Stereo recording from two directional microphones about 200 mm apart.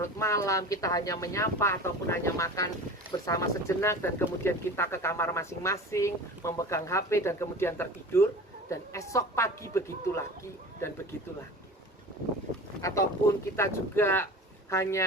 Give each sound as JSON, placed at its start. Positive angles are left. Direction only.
{"t": 0.0, "sound": "speech", "side_deg": 15}
{"t": 12.8, "sound": "speech", "side_deg": 15}